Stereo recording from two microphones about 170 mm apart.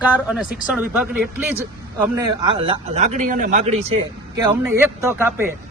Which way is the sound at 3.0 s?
50° right (ahead or behind).